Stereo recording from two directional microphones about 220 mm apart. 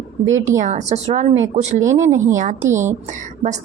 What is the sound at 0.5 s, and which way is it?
A woman's voice, 35° right (ahead or behind).